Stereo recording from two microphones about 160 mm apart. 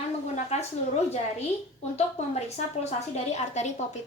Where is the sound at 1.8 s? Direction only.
40° left (ahead or behind).